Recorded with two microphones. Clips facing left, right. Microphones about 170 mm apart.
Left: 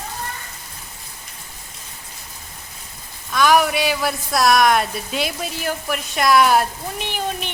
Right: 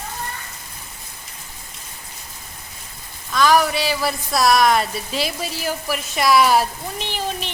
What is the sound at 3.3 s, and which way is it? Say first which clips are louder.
Speech: even; 5° left (ahead or behind).